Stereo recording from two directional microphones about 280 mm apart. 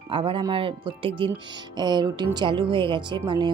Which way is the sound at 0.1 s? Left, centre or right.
Centre.